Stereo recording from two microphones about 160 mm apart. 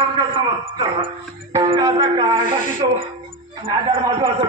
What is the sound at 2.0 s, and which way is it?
Speech, 30° right (ahead or behind).